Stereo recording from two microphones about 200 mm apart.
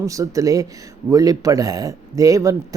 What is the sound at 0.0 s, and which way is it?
Speech, 15° right (ahead or behind).